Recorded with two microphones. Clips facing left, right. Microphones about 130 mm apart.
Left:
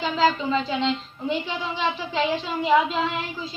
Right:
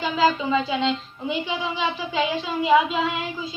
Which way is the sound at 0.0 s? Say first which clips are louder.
Right 1 dB; 5° right (ahead or behind).